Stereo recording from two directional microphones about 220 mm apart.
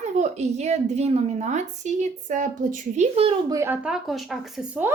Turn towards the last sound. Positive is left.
turn(degrees=-5)  # may be behind; listen again after turning